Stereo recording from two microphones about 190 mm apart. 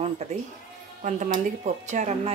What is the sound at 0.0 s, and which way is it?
A woman's voice, 35° right (ahead or behind).